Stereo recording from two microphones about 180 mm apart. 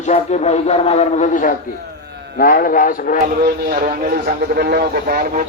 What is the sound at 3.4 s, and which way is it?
A man's voice, 50° right (ahead or behind).